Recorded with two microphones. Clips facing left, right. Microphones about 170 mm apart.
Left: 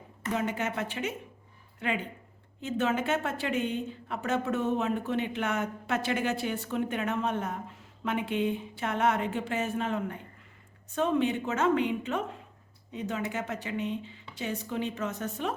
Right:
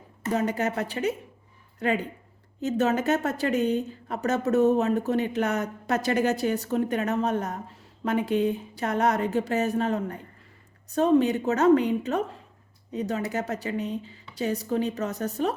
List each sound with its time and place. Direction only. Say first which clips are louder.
0.3 s a woman's voice: right 5 dB; 40° right (ahead or behind)